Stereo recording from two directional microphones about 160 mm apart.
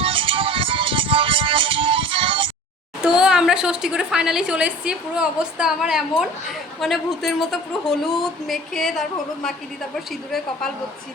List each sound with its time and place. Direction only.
0.0 s music: 35° right (ahead or behind)
3.0 s a woman's voice: 5° right (ahead or behind)